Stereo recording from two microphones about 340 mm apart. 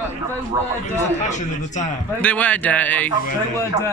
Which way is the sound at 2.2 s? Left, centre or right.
Centre.